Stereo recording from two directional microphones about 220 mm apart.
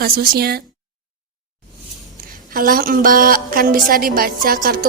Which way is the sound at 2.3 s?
40° right (ahead or behind).